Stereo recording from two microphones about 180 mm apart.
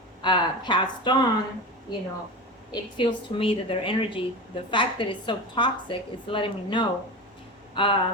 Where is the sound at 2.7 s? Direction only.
25° left (ahead or behind).